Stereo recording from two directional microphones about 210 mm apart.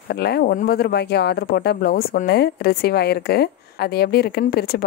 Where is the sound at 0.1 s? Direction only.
50° left (ahead or behind).